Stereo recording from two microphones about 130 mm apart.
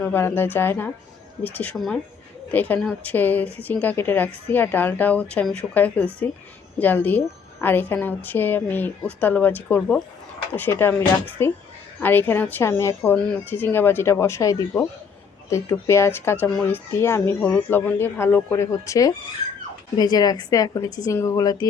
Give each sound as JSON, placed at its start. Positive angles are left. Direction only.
{"t": 0.0, "sound": "a woman's voice", "side_deg": 15}
{"t": 13.1, "sound": "a woman's voice", "side_deg": 10}